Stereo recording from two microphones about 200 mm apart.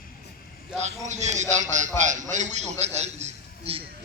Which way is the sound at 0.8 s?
35° right (ahead or behind).